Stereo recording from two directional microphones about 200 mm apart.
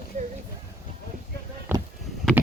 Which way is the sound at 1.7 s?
10° right (ahead or behind).